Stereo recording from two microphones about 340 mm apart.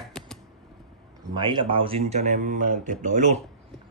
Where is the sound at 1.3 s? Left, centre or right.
Centre.